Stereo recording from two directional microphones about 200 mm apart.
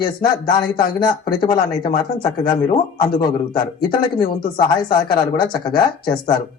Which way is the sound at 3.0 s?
45° left (ahead or behind).